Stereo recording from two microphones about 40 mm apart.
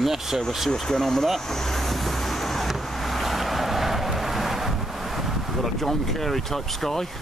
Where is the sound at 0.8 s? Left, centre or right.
Centre.